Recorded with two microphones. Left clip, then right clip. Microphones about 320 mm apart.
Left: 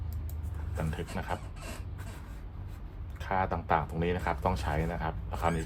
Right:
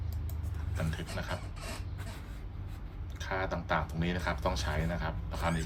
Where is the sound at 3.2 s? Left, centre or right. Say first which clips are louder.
Left 4 dB; left.